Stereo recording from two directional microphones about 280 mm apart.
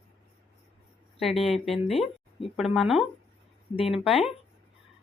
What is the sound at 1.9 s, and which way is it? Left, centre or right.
Speech, centre.